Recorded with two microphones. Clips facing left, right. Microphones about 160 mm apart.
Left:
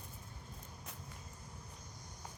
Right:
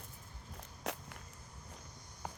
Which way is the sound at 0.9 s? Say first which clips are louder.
Right 15 dB; 85° right.